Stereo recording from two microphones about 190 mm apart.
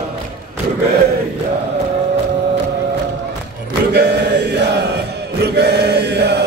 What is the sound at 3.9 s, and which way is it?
Chant, 60° right (ahead or behind).